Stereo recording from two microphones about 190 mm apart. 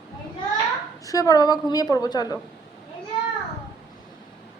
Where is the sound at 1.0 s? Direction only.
20° left (ahead or behind).